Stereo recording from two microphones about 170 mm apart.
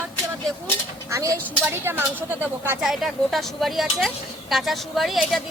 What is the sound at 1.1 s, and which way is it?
Speech, 20° right (ahead or behind).